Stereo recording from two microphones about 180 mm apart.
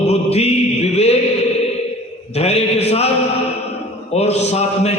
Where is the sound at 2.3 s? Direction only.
35° left (ahead or behind).